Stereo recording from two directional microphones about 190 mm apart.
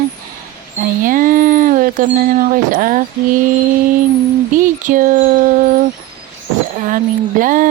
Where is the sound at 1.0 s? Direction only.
45° right (ahead or behind).